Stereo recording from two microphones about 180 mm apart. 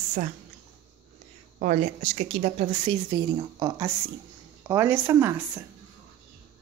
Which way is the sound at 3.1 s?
25° right (ahead or behind).